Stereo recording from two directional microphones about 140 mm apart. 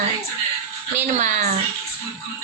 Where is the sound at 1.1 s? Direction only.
55° right (ahead or behind).